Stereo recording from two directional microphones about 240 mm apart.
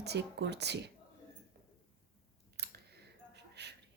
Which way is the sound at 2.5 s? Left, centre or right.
Right.